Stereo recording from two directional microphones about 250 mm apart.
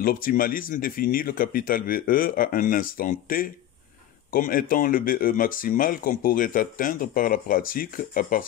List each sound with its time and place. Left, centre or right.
0.0 s speech: left